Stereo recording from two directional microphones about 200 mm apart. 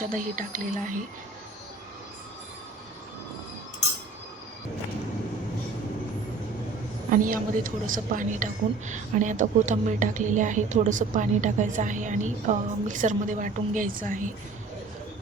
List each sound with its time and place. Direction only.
0.0 s a woman's voice: 40° right (ahead or behind)
7.1 s a woman's voice: 40° right (ahead or behind)